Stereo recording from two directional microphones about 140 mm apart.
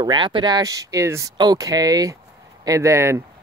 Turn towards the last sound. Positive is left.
turn(degrees=-20)  # may be behind; listen again after turning